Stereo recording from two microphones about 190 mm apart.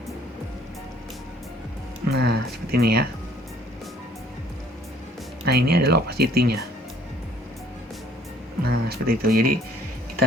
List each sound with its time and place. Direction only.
2.0 s speech: 60° right (ahead or behind)
5.5 s speech: 55° right (ahead or behind)
8.6 s speech: 55° right (ahead or behind)